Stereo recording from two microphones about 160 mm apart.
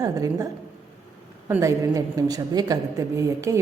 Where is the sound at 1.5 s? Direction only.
20° right (ahead or behind).